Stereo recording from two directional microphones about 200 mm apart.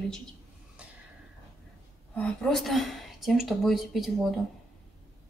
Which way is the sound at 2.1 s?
Centre (ahead or behind).